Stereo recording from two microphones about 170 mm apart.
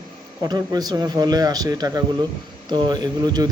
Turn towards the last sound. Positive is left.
turn(degrees=-25)  # may be behind; listen again after turning